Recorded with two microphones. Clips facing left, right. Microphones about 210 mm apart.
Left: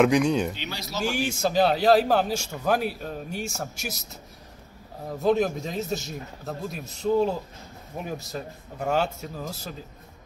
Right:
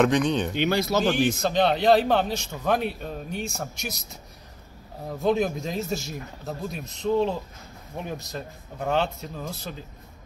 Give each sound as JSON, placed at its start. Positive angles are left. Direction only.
{"t": 0.0, "sound": "speech", "side_deg": 5}
{"t": 0.6, "sound": "speech", "side_deg": -55}
{"t": 1.1, "sound": "a man's voice", "side_deg": 10}
{"t": 5.2, "sound": "a man's voice", "side_deg": 0}